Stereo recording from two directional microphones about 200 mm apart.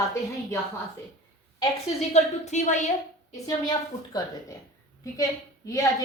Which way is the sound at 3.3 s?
20° left (ahead or behind).